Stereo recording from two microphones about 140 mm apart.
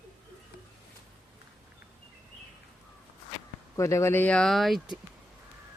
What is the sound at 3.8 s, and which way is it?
Speech, 20° left (ahead or behind).